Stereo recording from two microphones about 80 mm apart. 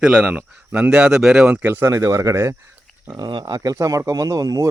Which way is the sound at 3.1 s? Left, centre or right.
Right.